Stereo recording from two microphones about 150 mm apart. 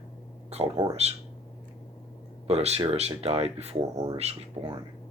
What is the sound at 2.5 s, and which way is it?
Speech, 45° right (ahead or behind).